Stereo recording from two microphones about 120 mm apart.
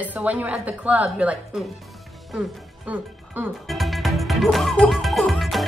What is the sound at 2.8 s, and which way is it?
Speech, 15° right (ahead or behind).